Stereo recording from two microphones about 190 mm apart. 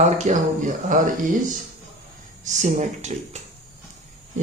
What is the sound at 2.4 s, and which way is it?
Speech, 40° right (ahead or behind).